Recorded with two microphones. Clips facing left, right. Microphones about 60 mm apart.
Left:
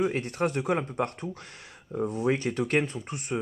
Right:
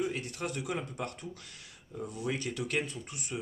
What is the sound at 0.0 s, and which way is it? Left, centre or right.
Speech, left.